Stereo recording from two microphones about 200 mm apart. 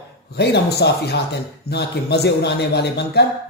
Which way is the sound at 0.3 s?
55° left (ahead or behind).